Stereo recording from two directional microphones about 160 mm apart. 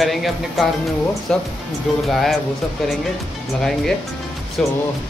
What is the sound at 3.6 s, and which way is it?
Speech, centre (ahead or behind).